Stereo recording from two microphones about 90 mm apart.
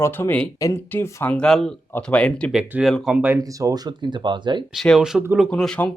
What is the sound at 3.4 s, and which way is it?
Speech, 40° right (ahead or behind).